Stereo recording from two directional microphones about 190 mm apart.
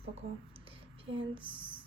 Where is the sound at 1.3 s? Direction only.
25° right (ahead or behind).